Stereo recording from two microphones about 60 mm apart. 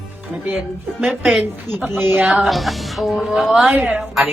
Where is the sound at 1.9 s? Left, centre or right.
Right.